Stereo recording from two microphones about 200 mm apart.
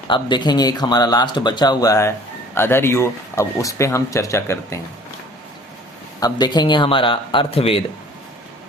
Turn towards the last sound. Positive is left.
turn(degrees=30)  # may be behind; listen again after turning